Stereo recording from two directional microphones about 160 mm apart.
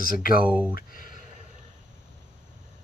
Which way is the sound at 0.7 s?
60° left (ahead or behind).